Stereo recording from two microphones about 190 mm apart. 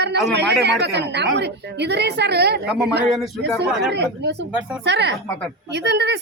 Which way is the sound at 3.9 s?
65° right (ahead or behind).